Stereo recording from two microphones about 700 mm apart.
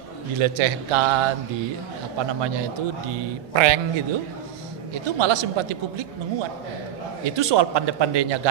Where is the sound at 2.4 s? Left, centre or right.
Right.